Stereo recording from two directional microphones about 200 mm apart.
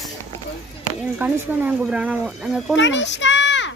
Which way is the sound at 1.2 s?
10° right (ahead or behind).